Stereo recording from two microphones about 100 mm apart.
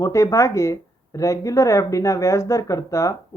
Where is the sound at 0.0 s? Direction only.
30° left (ahead or behind).